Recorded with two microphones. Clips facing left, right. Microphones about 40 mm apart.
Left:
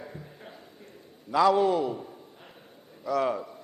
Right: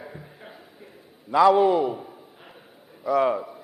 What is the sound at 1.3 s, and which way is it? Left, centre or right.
A man's voice, centre.